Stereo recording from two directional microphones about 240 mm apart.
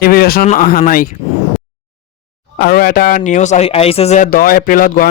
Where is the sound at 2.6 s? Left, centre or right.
Left.